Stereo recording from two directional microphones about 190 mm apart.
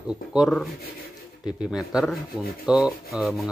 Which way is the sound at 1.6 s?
Centre (ahead or behind).